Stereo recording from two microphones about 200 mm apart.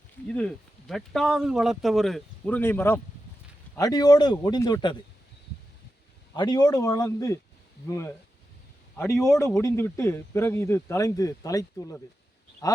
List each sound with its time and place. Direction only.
0.3 s speech: 5° left (ahead or behind); by 4.9 s 20° left (ahead or behind)
6.3 s speech: 20° left (ahead or behind)
9.2 s speech: 15° left (ahead or behind)